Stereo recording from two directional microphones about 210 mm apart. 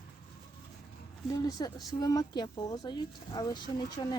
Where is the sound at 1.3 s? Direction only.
15° left (ahead or behind).